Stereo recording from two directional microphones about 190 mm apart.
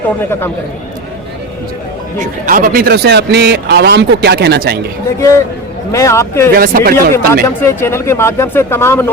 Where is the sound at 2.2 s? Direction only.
45° right (ahead or behind).